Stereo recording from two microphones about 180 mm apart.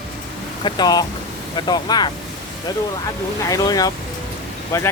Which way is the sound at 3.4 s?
20° left (ahead or behind).